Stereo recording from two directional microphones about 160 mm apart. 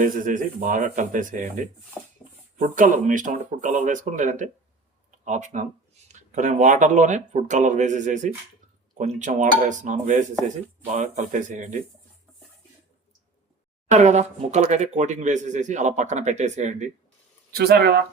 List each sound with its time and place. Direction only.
0.0 s speech: 55° right (ahead or behind)
13.9 s speech: 45° right (ahead or behind)
17.5 s speech: 80° right